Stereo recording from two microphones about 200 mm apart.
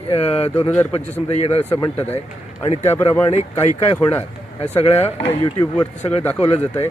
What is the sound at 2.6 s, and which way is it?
Speech, 30° left (ahead or behind).